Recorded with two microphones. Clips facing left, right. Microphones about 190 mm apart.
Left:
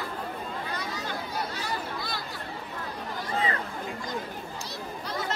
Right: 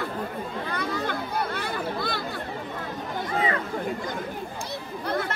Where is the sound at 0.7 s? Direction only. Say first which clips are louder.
Right 6 dB; 55° right (ahead or behind).